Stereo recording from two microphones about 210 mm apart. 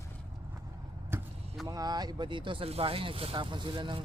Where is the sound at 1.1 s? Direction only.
10° right (ahead or behind).